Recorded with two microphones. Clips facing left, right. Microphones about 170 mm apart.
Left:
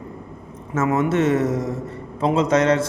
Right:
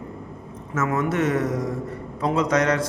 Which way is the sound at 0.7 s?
25° left (ahead or behind).